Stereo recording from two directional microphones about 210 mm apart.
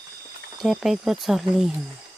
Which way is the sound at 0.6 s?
Centre (ahead or behind).